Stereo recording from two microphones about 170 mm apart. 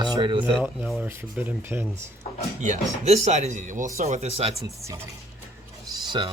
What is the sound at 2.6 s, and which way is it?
Speech, 40° right (ahead or behind).